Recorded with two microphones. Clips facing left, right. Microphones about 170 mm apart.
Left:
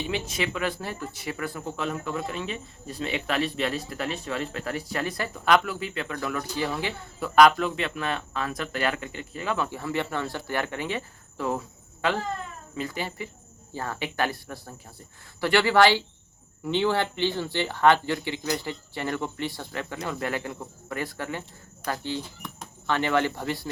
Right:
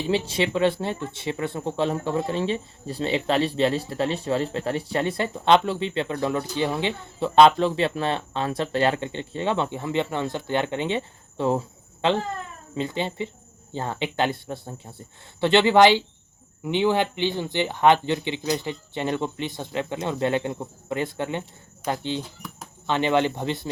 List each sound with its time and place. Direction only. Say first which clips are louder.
0.1 s speech: right 6 dB; 30° right (ahead or behind)